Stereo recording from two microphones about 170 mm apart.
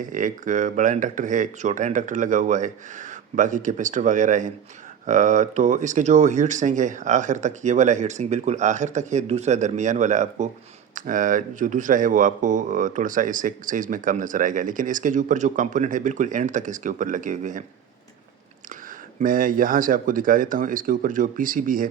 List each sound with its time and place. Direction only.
0.0 s speech: 50° right (ahead or behind)
19.2 s speech: 55° right (ahead or behind)